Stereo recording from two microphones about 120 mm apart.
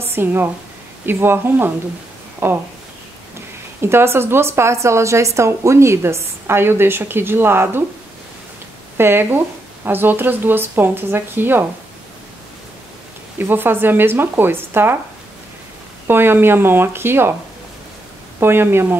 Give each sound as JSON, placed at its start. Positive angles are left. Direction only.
{"t": 0.0, "sound": "a woman's voice", "side_deg": -20}
{"t": 3.8, "sound": "a woman's voice", "side_deg": -20}
{"t": 8.9, "sound": "a woman's voice", "side_deg": -20}
{"t": 13.5, "sound": "speech", "side_deg": -15}
{"t": 16.1, "sound": "a woman's voice", "side_deg": -20}
{"t": 18.4, "sound": "a woman's voice", "side_deg": -20}